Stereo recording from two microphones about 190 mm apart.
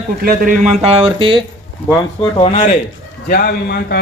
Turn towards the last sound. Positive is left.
turn(degrees=55)  # may be behind; listen again after turning